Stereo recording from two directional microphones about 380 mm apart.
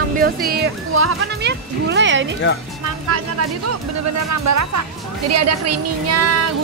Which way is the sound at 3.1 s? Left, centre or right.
Right.